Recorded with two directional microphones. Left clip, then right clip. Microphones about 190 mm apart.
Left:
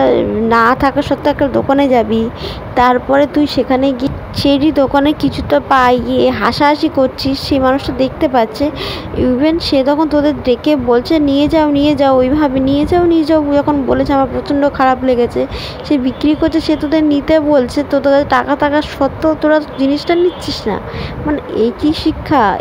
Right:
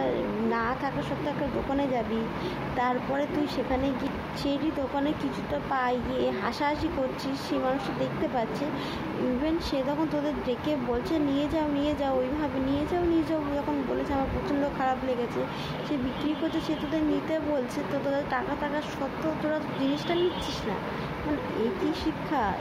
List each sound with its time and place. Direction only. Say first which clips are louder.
0.0 s speech: left 17 dB; 55° left (ahead or behind)
21.5 s speech: left 17 dB; 50° left (ahead or behind)